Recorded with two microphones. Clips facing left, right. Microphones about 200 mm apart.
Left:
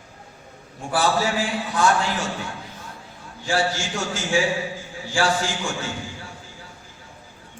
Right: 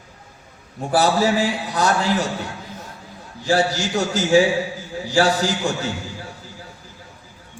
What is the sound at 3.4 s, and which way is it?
A man's voice, 40° right (ahead or behind).